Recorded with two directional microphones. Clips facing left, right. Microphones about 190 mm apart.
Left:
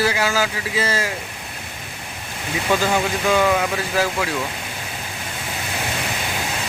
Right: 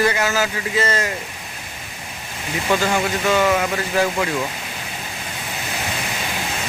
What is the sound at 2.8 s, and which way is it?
Speech, 10° left (ahead or behind).